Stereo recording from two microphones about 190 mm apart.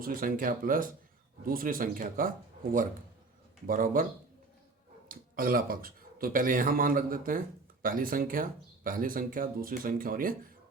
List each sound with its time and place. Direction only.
0.0 s speech: 50° right (ahead or behind)
3.7 s speech: 45° right (ahead or behind)
5.0 s speech: 50° right (ahead or behind)